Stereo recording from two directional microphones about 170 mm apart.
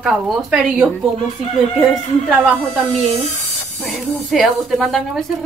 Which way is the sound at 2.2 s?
5° right (ahead or behind).